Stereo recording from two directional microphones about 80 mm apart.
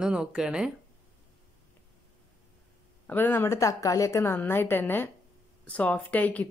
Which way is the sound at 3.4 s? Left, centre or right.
Left.